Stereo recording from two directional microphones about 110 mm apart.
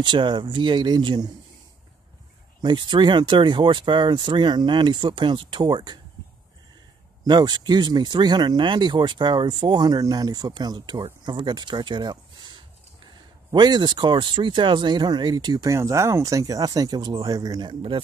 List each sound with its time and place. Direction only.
0.0 s speech: 45° right (ahead or behind)
2.6 s speech: 45° right (ahead or behind)
7.2 s speech: 40° right (ahead or behind)